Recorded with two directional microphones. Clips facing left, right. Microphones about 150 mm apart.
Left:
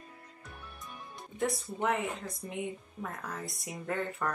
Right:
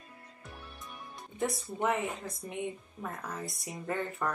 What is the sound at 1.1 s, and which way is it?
Speech, centre (ahead or behind).